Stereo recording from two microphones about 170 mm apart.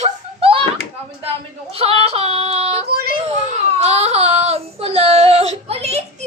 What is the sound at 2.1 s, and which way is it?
Yodeling, 35° right (ahead or behind).